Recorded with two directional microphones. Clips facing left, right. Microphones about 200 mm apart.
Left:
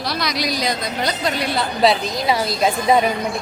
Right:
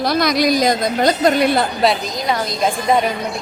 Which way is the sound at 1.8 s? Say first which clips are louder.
Even; centre (ahead or behind).